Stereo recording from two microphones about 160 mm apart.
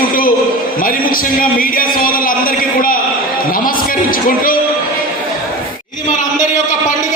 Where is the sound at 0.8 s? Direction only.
60° left (ahead or behind).